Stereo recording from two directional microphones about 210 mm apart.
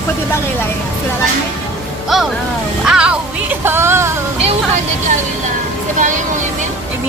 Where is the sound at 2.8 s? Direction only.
5° right (ahead or behind).